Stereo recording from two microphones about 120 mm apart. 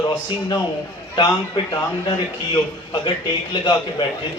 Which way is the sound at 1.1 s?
40° left (ahead or behind).